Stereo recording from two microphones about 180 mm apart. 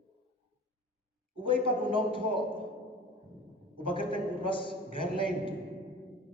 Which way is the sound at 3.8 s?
30° left (ahead or behind).